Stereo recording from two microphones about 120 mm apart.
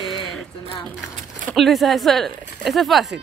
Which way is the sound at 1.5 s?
Centre (ahead or behind).